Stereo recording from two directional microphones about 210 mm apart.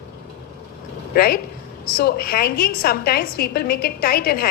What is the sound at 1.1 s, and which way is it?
A woman's voice, 45° left (ahead or behind).